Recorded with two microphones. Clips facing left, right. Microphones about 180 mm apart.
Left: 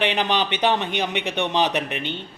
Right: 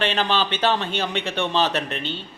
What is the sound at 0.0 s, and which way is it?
A man's voice, 15° left (ahead or behind).